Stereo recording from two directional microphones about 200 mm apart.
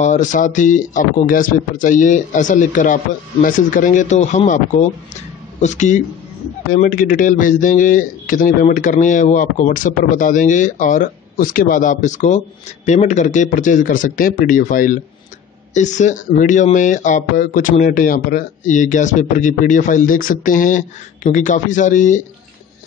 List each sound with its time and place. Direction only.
0.0 s speech: 40° left (ahead or behind)